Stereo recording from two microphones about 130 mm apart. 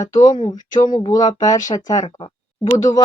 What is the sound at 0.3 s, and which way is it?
Speech, 40° left (ahead or behind).